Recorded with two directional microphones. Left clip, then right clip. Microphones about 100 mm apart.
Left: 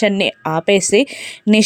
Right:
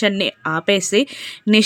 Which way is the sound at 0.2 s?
30° left (ahead or behind).